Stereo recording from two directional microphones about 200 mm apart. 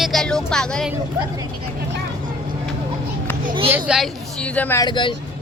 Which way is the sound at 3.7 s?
5° right (ahead or behind).